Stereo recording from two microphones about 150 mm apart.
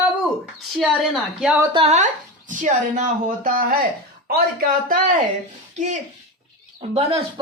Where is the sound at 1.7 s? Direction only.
45° right (ahead or behind).